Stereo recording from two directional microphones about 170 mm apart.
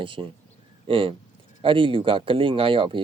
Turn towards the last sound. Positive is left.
turn(degrees=-30)  # may be behind; listen again after turning